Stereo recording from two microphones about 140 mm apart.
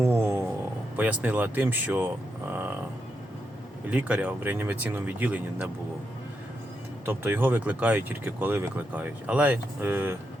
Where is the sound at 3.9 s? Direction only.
10° right (ahead or behind).